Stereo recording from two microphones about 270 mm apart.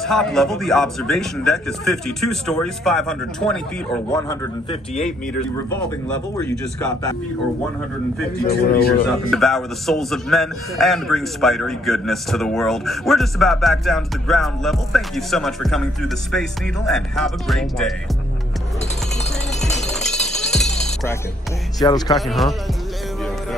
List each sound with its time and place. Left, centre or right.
0.0 s a man's voice: centre
4.3 s a man's voice: left
6.3 s speech: centre
8.4 s speech: left
9.3 s a man's voice: centre
19.9 s a sound: centre
20.8 s music: centre
21.7 s speech: centre
22.1 s a man's voice: centre